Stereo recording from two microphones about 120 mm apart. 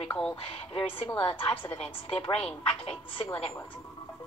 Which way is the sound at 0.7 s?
50° left (ahead or behind).